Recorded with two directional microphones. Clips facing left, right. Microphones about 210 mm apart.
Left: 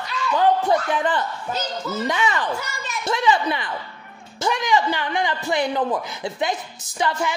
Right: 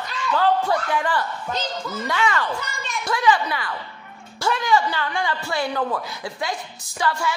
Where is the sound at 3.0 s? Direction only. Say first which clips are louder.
Left 1 dB; 25° left (ahead or behind).